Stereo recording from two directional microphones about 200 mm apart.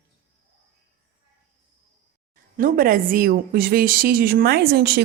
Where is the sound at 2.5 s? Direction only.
45° right (ahead or behind).